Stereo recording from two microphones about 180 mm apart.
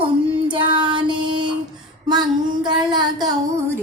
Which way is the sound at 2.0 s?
25° right (ahead or behind).